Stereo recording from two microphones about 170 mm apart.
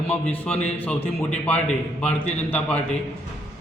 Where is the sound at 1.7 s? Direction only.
40° left (ahead or behind).